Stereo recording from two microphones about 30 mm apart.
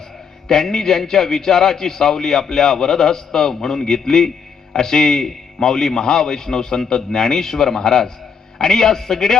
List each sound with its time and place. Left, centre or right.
0.4 s a man's voice: centre